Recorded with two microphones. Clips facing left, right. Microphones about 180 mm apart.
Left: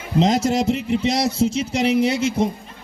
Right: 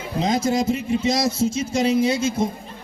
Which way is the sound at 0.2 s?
80° left.